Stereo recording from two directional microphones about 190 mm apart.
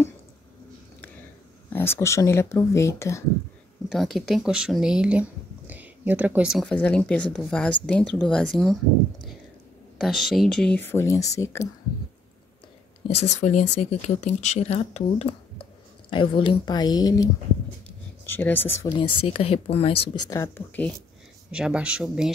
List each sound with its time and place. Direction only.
1.7 s speech: 10° left (ahead or behind)
3.9 s speech: centre (ahead or behind)
9.9 s speech: centre (ahead or behind); by 11.7 s 15° left (ahead or behind)
13.1 s speech: 35° left (ahead or behind); by 17.3 s 20° left (ahead or behind)
17.8 s a sound: 10° left (ahead or behind)
18.9 s speech: 25° left (ahead or behind); by 20.9 s 10° left (ahead or behind)
21.5 s speech: 5° right (ahead or behind)